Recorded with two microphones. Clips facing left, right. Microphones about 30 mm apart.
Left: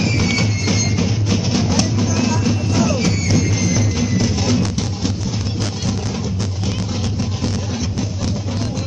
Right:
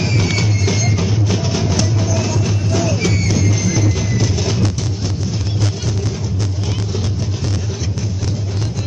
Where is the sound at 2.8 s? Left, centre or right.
Left.